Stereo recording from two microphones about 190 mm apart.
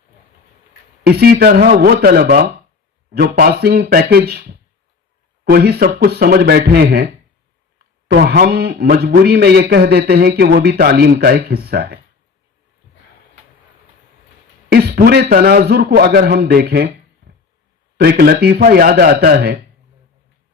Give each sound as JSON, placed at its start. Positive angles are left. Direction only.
{"t": 1.0, "sound": "a man's voice", "side_deg": -55}
{"t": 8.1, "sound": "a man's voice", "side_deg": -50}
{"t": 14.7, "sound": "a man's voice", "side_deg": -55}